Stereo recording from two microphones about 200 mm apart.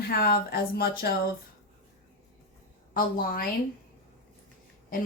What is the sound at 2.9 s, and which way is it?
Speech, 45° left (ahead or behind).